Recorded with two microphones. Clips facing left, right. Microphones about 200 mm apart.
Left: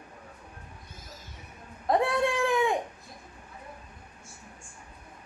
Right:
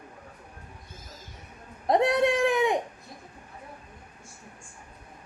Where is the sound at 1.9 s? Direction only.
20° right (ahead or behind).